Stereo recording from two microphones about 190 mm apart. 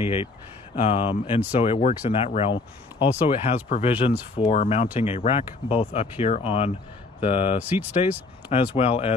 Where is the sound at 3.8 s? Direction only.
30° left (ahead or behind).